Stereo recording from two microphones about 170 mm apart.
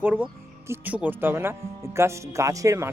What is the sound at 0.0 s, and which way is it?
Speech, 10° right (ahead or behind).